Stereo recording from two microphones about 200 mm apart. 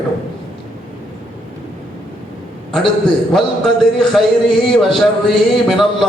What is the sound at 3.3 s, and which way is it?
A man's voice, centre (ahead or behind).